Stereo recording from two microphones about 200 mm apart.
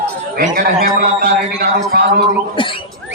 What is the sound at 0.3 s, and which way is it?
A man's voice, 40° right (ahead or behind).